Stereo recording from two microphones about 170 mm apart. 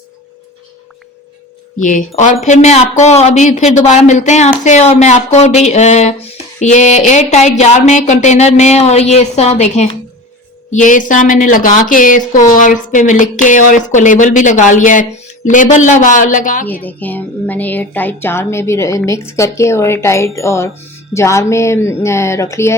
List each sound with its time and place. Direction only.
1.8 s speech: 50° left (ahead or behind)
16.8 s music: 10° left (ahead or behind)